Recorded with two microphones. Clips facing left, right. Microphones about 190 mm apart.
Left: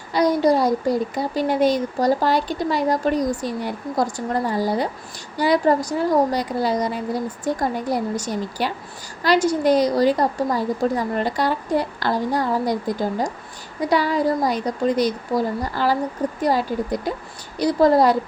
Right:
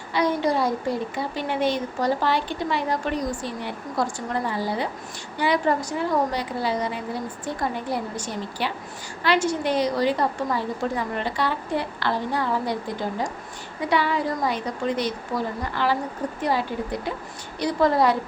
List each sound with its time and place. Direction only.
0.1 s speech: 40° left (ahead or behind)